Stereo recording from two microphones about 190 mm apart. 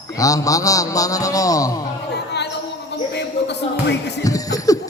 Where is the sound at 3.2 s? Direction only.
65° left (ahead or behind).